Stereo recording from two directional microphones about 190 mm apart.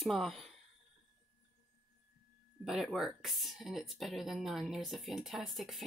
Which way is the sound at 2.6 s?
Centre (ahead or behind).